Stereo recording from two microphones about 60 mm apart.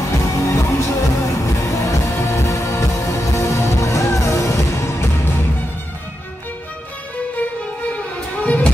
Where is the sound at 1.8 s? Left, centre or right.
Left.